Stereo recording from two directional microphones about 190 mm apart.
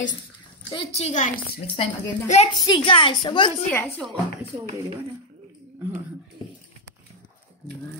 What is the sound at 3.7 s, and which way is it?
Speech, centre (ahead or behind).